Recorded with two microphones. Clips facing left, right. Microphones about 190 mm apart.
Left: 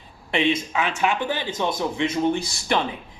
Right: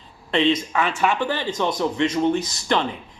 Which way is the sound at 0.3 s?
15° left (ahead or behind).